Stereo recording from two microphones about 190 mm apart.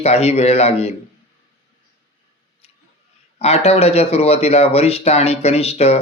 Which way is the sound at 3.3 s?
35° left (ahead or behind).